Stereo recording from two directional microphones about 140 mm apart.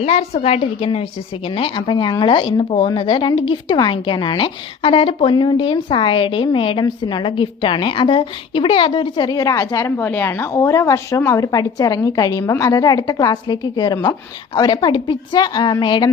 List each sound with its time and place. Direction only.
0.0 s a woman's voice: 45° left (ahead or behind)